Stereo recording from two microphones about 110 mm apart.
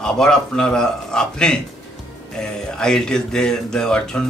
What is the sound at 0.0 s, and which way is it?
Speech, 5° left (ahead or behind).